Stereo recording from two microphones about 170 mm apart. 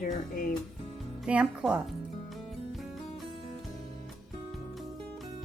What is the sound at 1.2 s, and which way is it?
Speech, 5° right (ahead or behind).